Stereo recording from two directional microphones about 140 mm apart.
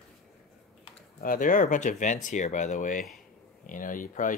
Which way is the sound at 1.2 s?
75° left (ahead or behind).